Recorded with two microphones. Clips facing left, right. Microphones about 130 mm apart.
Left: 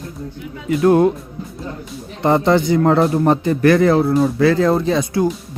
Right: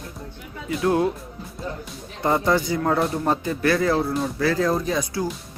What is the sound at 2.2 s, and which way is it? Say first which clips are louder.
Speech: left 6 dB; 65° left (ahead or behind).